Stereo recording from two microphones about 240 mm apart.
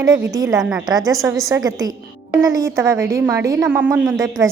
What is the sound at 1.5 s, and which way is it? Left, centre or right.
A woman's voice, centre.